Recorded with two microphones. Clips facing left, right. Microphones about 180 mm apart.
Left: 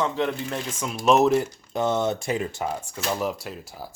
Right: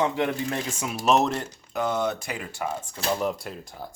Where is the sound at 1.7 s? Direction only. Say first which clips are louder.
Left 2 dB; 25° left (ahead or behind).